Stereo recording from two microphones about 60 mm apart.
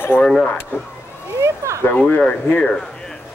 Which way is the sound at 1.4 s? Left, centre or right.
Right.